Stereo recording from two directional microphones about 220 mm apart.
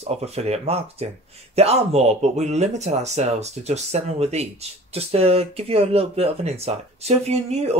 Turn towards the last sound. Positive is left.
turn(degrees=-30)  # may be behind; listen again after turning